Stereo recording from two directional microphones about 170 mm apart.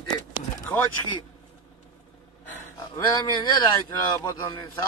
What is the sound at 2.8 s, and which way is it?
Speech, 20° left (ahead or behind).